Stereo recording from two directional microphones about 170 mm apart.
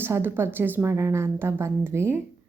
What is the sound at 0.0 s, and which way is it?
A woman's voice, 15° right (ahead or behind).